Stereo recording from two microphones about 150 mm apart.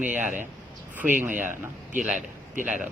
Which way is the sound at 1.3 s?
60° right (ahead or behind).